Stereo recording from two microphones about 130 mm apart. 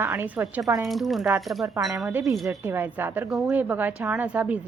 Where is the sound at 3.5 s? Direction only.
15° right (ahead or behind).